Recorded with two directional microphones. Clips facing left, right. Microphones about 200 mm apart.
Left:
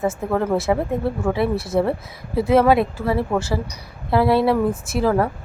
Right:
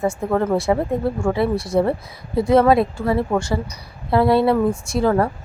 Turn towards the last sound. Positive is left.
turn(degrees=0)  # may be behind; listen again after turning